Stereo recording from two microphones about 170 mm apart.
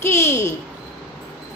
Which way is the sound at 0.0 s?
15° left (ahead or behind).